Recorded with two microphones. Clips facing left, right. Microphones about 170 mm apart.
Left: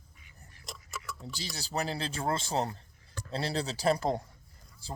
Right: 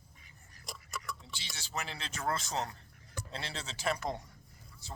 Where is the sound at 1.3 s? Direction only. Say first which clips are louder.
Left 9 dB; 40° left (ahead or behind).